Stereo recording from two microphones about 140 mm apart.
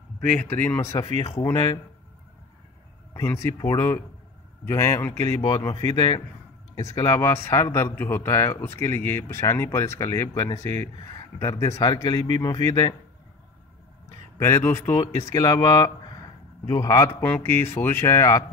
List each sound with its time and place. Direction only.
0.2 s a man's voice: 10° left (ahead or behind); by 1.8 s 25° left (ahead or behind)
3.1 s a man's voice: 20° left (ahead or behind)
14.4 s a man's voice: 20° left (ahead or behind)
17.2 s speech: 15° left (ahead or behind)